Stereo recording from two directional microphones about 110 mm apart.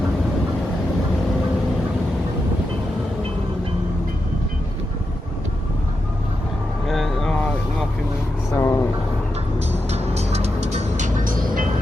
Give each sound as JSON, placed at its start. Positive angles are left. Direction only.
{"t": 6.8, "sound": "vehicle", "side_deg": 0}
{"t": 8.4, "sound": "vehicle", "side_deg": 30}
{"t": 9.6, "sound": "music", "side_deg": -85}